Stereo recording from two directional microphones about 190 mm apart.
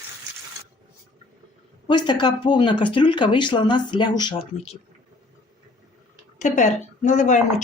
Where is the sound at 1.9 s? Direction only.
25° left (ahead or behind).